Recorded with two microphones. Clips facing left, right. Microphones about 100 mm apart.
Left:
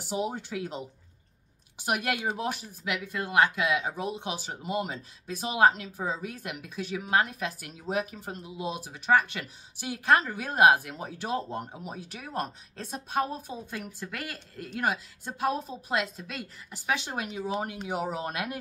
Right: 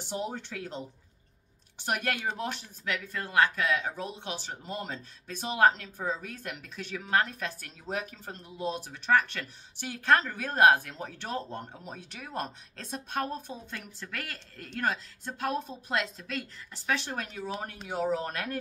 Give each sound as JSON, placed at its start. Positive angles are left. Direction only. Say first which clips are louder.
{"t": 0.0, "sound": "speech", "louder": "left 3 dB", "side_deg": 10}